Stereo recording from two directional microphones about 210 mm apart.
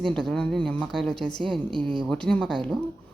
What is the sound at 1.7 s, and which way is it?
Speech, 25° right (ahead or behind).